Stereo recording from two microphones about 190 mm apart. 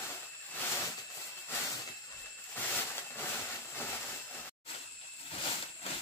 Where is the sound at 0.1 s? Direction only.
10° left (ahead or behind).